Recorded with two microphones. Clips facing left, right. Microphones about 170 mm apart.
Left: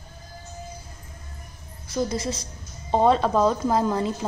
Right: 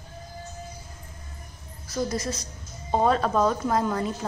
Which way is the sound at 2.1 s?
25° left (ahead or behind).